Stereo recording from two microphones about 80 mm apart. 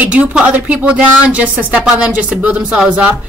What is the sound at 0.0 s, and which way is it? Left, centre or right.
Speech, centre.